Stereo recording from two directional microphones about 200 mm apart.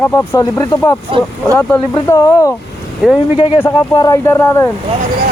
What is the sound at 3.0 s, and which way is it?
Speech, 5° right (ahead or behind).